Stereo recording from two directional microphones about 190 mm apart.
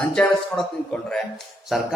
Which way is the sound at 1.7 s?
Centre (ahead or behind).